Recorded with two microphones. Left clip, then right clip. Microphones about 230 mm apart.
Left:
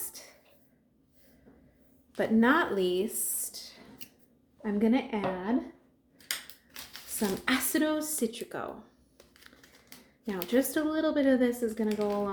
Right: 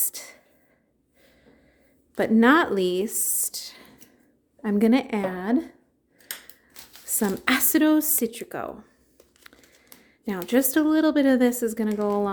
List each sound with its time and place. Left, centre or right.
0.1 s whispering: right
2.1 s speech: right
7.2 s speech: right
10.2 s speech: right